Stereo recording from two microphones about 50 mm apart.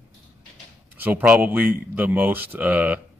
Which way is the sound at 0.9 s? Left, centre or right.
Right.